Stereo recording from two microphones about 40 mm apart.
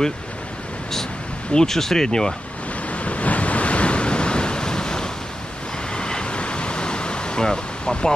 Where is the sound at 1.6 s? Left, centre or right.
Centre.